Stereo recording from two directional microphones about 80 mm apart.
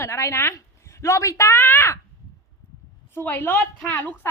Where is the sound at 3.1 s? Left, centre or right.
Left.